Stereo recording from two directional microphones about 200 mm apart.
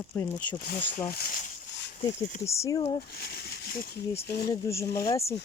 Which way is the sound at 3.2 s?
55° left (ahead or behind).